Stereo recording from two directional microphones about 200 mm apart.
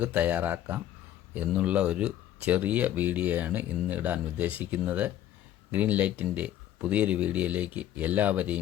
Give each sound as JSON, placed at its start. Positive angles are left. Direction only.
{"t": 0.0, "sound": "speech", "side_deg": -10}